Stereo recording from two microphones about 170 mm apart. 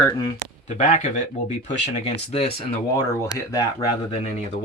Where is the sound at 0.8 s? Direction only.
45° left (ahead or behind).